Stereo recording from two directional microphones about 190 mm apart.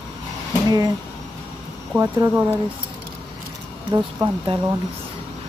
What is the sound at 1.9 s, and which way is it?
Speech, 10° right (ahead or behind).